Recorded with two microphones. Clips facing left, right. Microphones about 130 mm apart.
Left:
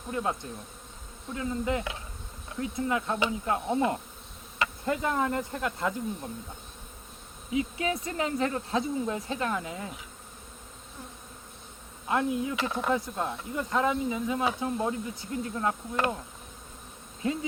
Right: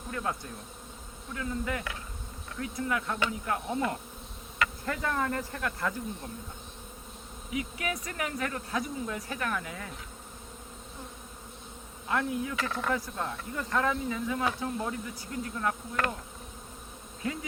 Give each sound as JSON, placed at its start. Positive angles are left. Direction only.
{"t": 0.1, "sound": "speech", "side_deg": 20}
{"t": 7.5, "sound": "speech", "side_deg": 25}
{"t": 12.0, "sound": "speech", "side_deg": 20}
{"t": 17.2, "sound": "speech", "side_deg": 25}